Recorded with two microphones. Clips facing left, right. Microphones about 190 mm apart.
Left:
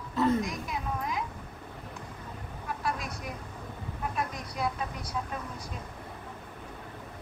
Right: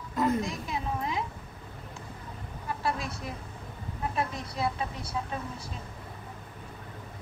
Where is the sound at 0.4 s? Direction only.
30° right (ahead or behind).